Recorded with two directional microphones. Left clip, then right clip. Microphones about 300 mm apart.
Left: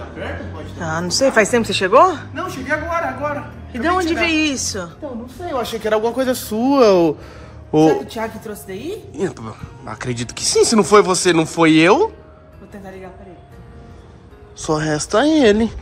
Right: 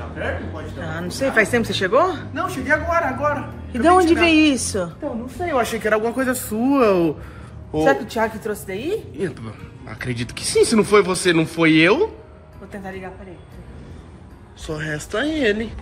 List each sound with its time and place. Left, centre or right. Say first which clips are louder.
0.8 s a woman's voice: left 7 dB; centre
5.5 s speech: even; centre
8.1 s a woman's voice: right 4 dB; centre
14.7 s speech: left 8 dB; left
15.1 s speech: left 7 dB; left